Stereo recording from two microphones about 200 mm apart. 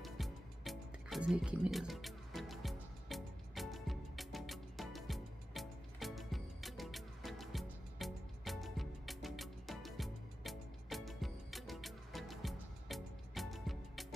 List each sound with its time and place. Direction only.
0.0 s music: centre (ahead or behind)